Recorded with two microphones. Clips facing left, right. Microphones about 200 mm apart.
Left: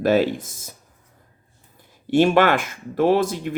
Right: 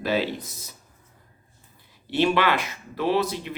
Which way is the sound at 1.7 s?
45° left (ahead or behind).